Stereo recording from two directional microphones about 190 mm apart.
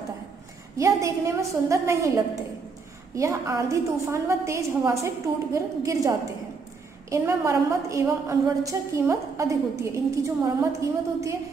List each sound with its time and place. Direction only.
0.7 s a woman's voice: 15° right (ahead or behind)
3.2 s a woman's voice: 15° right (ahead or behind)